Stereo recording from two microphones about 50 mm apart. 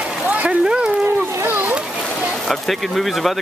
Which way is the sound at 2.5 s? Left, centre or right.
Centre.